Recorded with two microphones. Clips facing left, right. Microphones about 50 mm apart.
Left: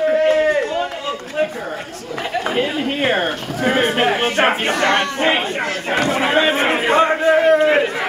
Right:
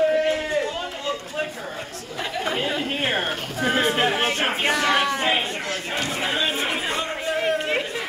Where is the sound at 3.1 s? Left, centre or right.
Left.